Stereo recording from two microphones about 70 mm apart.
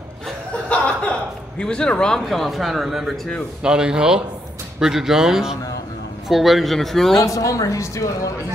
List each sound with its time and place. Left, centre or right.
0.5 s chuckle: centre
1.6 s speech: centre
2.2 s a man's voice: centre
7.3 s a woman's voice: left